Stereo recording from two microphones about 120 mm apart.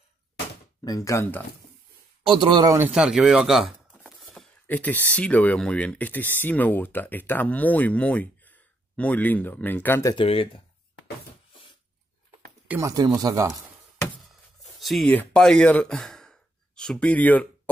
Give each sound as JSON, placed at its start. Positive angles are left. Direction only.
{"t": 0.8, "sound": "speech", "side_deg": 30}
{"t": 2.2, "sound": "a man's voice", "side_deg": -40}
{"t": 2.9, "sound": "speech", "side_deg": -5}
{"t": 3.9, "sound": "a sound", "side_deg": -5}
{"t": 4.6, "sound": "speech", "side_deg": 15}
{"t": 10.1, "sound": "speech", "side_deg": 50}
{"t": 12.8, "sound": "speech", "side_deg": -30}
{"t": 14.6, "sound": "a sound", "side_deg": 0}
{"t": 15.0, "sound": "speech", "side_deg": 10}